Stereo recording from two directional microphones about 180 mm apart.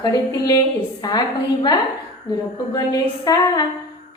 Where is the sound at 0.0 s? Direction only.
20° left (ahead or behind).